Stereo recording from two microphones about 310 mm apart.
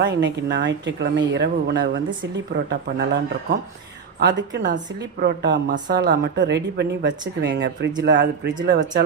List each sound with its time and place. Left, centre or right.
0.0 s speech: right
4.2 s speech: right